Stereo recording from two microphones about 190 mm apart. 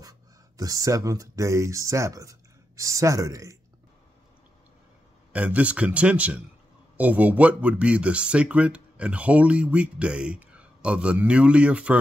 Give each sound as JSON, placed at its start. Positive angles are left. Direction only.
{"t": 0.6, "sound": "speech", "side_deg": -20}
{"t": 5.3, "sound": "speech", "side_deg": -5}